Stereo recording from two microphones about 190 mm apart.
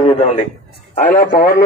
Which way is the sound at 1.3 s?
55° left (ahead or behind).